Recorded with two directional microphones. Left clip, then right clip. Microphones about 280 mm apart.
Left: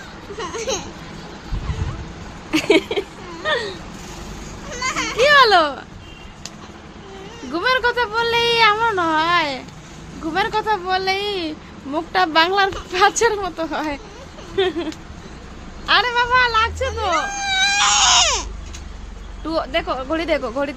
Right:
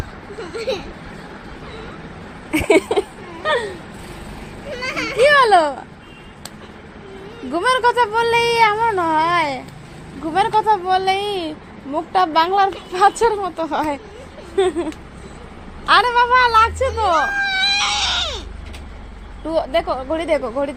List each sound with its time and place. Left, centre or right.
2.6 s speech: centre
5.2 s a child's voice: centre
7.5 s speech: centre
17.3 s baby cry: centre; by 18.4 s left
19.5 s speech: centre